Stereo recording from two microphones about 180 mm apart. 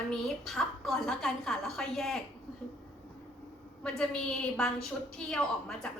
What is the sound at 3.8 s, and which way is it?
A woman's voice, 5° left (ahead or behind).